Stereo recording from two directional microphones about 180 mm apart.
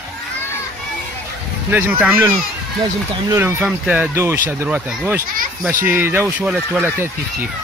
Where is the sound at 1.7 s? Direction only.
10° right (ahead or behind).